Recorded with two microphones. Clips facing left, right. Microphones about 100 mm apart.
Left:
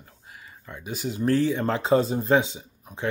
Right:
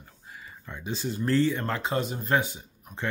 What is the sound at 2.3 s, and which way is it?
Speech, 20° left (ahead or behind).